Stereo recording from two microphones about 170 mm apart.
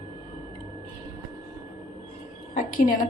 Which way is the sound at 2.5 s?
50° left (ahead or behind).